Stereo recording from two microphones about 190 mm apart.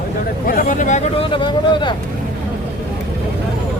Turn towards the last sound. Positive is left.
turn(degrees=25)  # may be behind; listen again after turning